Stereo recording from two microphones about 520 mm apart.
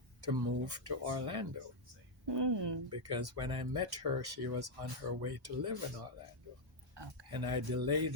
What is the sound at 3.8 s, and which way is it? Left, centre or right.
Speech, right.